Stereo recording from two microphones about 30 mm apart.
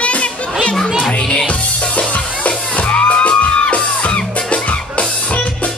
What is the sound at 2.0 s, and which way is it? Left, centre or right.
Music, left.